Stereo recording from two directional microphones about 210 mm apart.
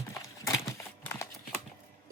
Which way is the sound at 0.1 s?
15° left (ahead or behind).